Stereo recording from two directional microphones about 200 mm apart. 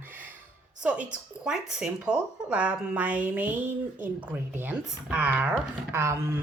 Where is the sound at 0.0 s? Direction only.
10° right (ahead or behind).